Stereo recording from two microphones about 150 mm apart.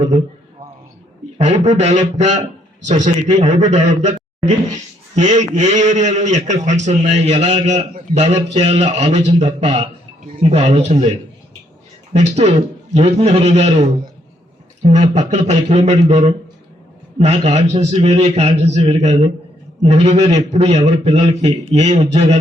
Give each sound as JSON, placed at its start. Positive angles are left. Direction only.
{"t": 1.4, "sound": "a man's voice", "side_deg": -50}
{"t": 5.1, "sound": "a man's voice", "side_deg": -55}
{"t": 12.1, "sound": "a man's voice", "side_deg": -45}